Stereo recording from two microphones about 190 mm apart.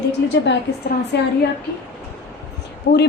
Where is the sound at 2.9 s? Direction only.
55° left (ahead or behind).